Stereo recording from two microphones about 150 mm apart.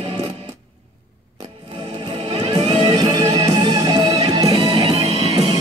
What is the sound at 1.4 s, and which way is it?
Music, 30° right (ahead or behind).